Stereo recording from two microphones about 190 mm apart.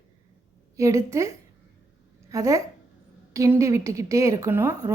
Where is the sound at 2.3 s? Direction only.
15° right (ahead or behind).